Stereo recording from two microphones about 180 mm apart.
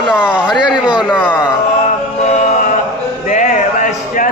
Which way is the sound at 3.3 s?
45° left (ahead or behind).